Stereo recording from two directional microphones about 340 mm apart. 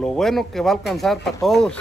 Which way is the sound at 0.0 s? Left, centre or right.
Centre.